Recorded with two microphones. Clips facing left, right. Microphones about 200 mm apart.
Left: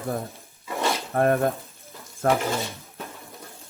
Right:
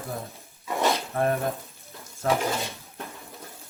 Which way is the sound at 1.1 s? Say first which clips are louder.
Left 4 dB; 55° left (ahead or behind).